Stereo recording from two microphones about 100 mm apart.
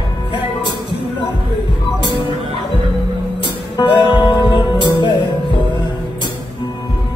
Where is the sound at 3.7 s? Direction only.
55° left (ahead or behind).